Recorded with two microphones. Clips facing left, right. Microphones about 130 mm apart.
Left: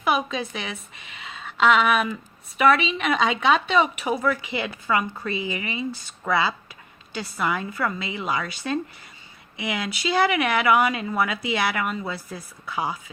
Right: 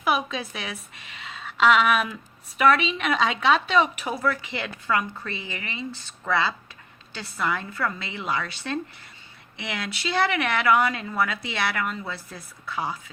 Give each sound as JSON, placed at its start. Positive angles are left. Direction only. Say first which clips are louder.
{"t": 0.0, "sound": "a woman's voice", "louder": "left 2 dB", "side_deg": 0}
{"t": 12.6, "sound": "speech", "louder": "left 2 dB", "side_deg": 15}